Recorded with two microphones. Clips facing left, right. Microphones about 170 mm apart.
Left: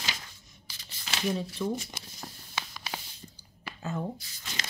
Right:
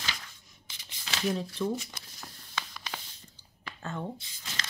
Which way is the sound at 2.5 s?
5° left (ahead or behind).